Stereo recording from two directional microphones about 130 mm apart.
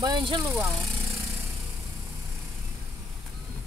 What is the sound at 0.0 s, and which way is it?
Speech, 40° right (ahead or behind).